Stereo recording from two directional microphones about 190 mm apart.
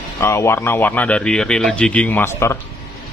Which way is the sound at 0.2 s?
15° left (ahead or behind).